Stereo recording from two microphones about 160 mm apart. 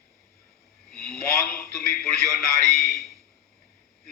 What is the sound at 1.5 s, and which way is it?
Speech, 70° left (ahead or behind).